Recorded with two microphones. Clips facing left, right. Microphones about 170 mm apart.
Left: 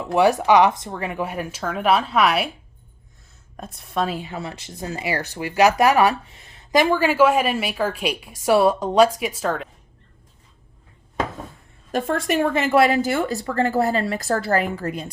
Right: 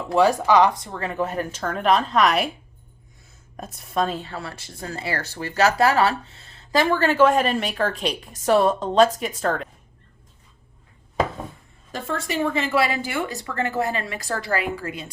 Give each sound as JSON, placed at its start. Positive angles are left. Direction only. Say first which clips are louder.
{"t": 0.1, "sound": "speech", "louder": "left 1 dB", "side_deg": 20}
{"t": 3.6, "sound": "speech", "louder": "even", "side_deg": 0}
{"t": 11.9, "sound": "a woman's voice", "louder": "left 6 dB", "side_deg": 50}